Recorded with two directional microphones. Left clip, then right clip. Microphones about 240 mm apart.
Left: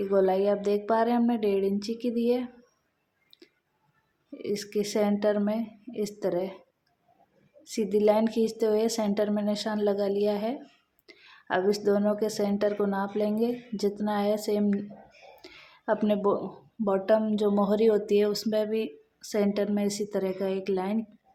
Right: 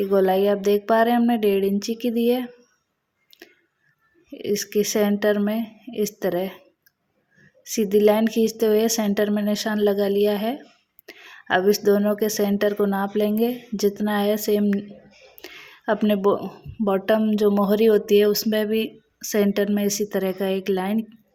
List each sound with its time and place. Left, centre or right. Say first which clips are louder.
0.0 s speech: right 5 dB; right
4.3 s speech: right 7 dB; right
7.6 s speech: right 7 dB; right